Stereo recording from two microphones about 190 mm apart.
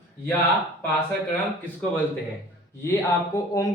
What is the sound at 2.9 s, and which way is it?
Speech, 15° left (ahead or behind).